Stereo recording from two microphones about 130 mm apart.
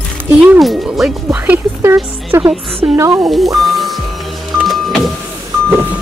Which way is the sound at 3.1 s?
Centre (ahead or behind).